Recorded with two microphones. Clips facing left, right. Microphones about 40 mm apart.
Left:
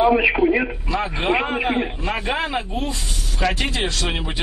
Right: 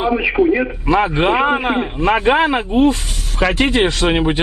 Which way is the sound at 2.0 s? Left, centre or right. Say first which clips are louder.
Right 10 dB; right.